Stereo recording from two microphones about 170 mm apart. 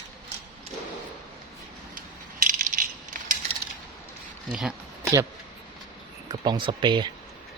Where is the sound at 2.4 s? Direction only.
55° right (ahead or behind).